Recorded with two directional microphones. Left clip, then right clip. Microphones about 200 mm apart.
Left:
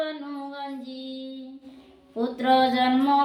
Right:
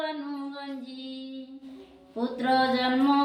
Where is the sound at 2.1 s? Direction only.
25° left (ahead or behind).